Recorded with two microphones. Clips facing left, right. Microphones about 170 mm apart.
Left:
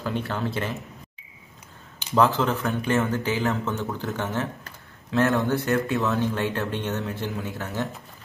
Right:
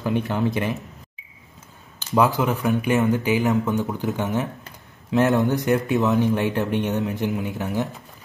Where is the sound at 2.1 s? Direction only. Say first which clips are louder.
Right 1 dB; 10° right (ahead or behind).